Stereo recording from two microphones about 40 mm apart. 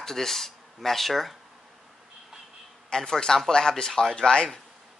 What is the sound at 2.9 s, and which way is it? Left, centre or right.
Speech, centre.